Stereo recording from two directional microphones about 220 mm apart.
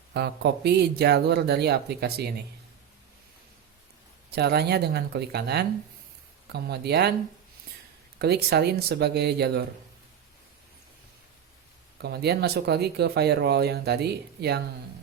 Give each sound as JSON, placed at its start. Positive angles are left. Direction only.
{"t": 0.1, "sound": "speech", "side_deg": -50}
{"t": 4.3, "sound": "speech", "side_deg": -45}
{"t": 8.2, "sound": "speech", "side_deg": -45}
{"t": 12.0, "sound": "speech", "side_deg": -45}